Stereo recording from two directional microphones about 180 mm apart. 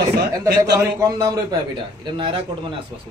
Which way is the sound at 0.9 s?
20° right (ahead or behind).